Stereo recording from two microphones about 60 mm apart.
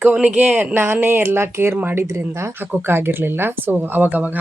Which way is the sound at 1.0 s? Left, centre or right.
Right.